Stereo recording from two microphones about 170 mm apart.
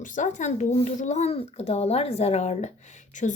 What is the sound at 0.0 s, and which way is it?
A woman's voice, 45° left (ahead or behind).